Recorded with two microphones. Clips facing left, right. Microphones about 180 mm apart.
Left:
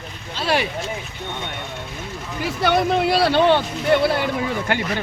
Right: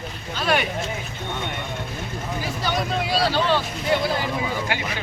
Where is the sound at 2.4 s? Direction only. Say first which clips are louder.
Left 8 dB; 65° left (ahead or behind).